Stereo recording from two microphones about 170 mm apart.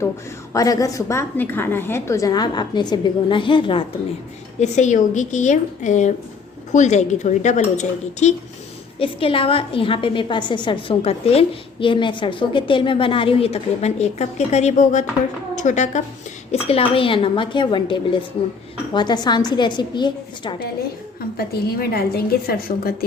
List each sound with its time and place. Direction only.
0.5 s a woman's voice: 20° left (ahead or behind)
4.6 s speech: 45° left (ahead or behind)
9.0 s a woman's voice: 35° left (ahead or behind)
21.3 s a woman's voice: 65° left (ahead or behind)